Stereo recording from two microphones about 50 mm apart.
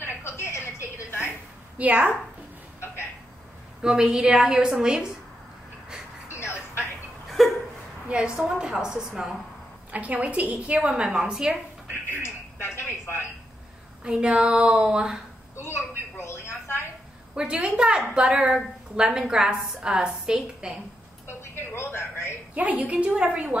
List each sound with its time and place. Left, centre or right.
0.0 s a sound: left
1.8 s a woman's voice: right
3.8 s a woman's voice: centre
6.3 s a sound: left
7.2 s a sound: centre
8.4 s a woman's voice: centre
9.8 s a woman's voice: right
10.8 s a woman's voice: centre
12.1 s television: left
14.0 s a woman's voice: right
15.6 s a sound: left
17.4 s a woman's voice: centre
21.3 s a woman's voice: left
22.5 s a woman's voice: right